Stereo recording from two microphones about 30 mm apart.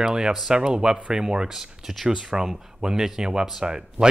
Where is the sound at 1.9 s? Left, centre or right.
Centre.